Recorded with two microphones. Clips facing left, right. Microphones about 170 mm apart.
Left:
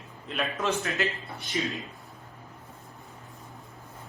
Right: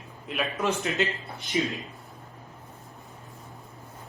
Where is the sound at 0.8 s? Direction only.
20° right (ahead or behind).